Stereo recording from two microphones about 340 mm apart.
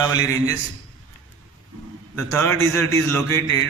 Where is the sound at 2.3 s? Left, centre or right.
Right.